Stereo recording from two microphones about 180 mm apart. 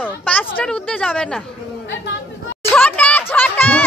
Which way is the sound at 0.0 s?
10° left (ahead or behind).